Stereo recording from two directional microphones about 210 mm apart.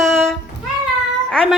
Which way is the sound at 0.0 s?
Centre (ahead or behind).